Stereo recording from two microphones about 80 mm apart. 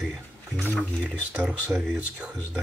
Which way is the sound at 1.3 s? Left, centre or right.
Centre.